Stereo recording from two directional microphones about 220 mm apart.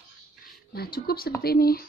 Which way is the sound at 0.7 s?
45° left (ahead or behind).